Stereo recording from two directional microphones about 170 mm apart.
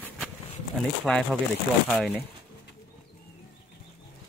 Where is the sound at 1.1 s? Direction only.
5° left (ahead or behind).